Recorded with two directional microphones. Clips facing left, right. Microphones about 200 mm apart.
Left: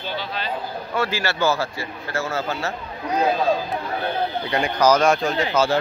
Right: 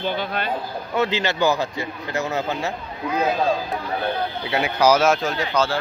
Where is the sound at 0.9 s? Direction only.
20° right (ahead or behind).